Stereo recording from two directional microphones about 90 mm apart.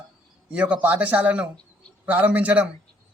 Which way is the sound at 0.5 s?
15° right (ahead or behind).